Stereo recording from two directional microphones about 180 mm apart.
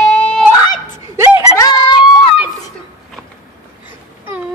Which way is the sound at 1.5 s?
25° left (ahead or behind).